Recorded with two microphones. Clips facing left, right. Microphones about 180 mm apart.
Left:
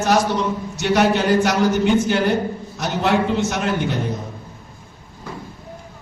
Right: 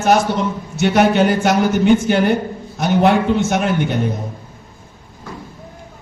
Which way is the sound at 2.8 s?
55° right (ahead or behind).